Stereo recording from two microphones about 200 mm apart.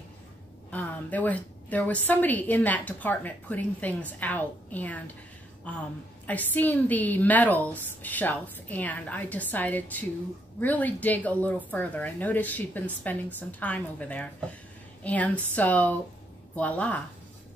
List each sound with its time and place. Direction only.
0.7 s a woman's voice: 10° left (ahead or behind)